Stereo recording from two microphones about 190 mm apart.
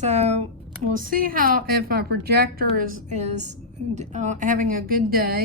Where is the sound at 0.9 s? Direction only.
45° right (ahead or behind).